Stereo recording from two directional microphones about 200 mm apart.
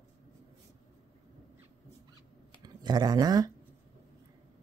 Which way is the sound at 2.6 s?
20° right (ahead or behind).